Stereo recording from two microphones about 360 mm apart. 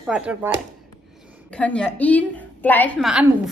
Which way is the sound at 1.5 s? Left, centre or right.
Centre.